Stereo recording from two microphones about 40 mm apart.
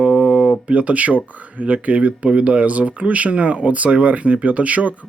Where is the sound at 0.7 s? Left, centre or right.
Right.